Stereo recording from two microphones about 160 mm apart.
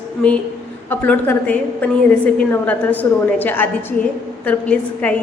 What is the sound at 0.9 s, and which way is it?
A woman's voice, 10° left (ahead or behind).